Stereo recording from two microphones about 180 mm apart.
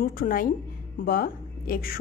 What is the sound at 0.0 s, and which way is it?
Speech, 55° left (ahead or behind).